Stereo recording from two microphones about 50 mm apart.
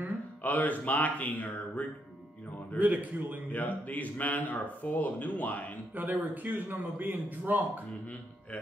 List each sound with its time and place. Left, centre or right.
0.4 s speech: left
2.8 s a man's voice: right
3.5 s speech: left
5.9 s a man's voice: right